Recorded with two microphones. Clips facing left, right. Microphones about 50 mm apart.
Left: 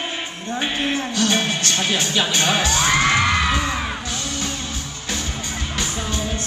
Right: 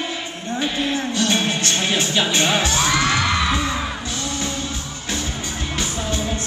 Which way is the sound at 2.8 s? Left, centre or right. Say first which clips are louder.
Left 1 dB; left.